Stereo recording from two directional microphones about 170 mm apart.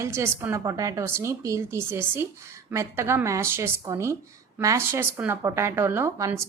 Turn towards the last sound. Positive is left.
turn(degrees=-15)  # may be behind; listen again after turning